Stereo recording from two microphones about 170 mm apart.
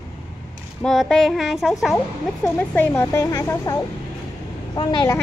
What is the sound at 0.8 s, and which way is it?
Speech, centre (ahead or behind).